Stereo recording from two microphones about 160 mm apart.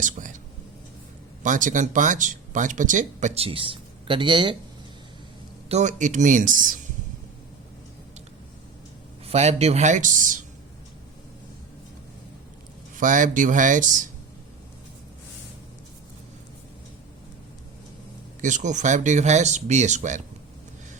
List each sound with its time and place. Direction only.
0.0 s speech: 55° right (ahead or behind)
1.4 s speech: 55° right (ahead or behind); by 4.5 s 30° right (ahead or behind)
5.6 s speech: 45° right (ahead or behind)
9.2 s speech: 40° right (ahead or behind)
13.0 s speech: 55° right (ahead or behind)
18.4 s speech: 50° right (ahead or behind)